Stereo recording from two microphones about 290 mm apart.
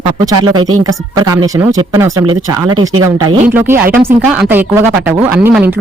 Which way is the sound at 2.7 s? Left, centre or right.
Right.